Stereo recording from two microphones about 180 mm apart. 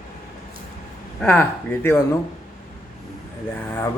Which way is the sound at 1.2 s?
10° left (ahead or behind).